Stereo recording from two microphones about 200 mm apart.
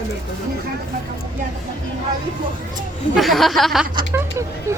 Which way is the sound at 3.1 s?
Centre (ahead or behind).